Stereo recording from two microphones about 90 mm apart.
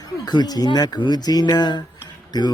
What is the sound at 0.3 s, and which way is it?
Speech, 50° left (ahead or behind).